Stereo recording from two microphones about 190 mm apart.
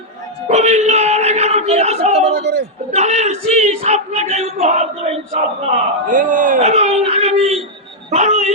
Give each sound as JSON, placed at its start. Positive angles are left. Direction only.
{"t": 0.4, "sound": "a sound", "side_deg": -35}
{"t": 2.3, "sound": "a man's voice", "side_deg": -55}
{"t": 2.9, "sound": "speech", "side_deg": -35}
{"t": 8.1, "sound": "dog", "side_deg": -35}